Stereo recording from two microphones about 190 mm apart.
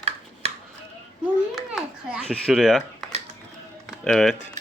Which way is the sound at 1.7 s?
Centre (ahead or behind).